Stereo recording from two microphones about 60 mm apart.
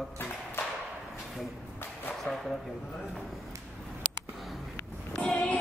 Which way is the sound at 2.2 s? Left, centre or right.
Centre.